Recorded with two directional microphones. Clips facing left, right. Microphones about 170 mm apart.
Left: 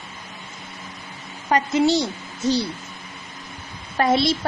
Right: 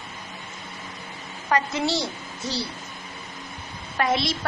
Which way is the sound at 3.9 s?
30° left (ahead or behind).